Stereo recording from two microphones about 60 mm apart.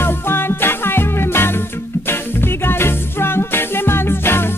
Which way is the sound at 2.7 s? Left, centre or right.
Left.